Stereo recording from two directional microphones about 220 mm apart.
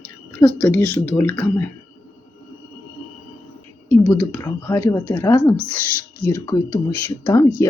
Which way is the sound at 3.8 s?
10° left (ahead or behind).